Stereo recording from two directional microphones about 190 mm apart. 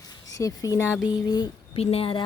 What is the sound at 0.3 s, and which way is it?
A woman's voice, 15° left (ahead or behind).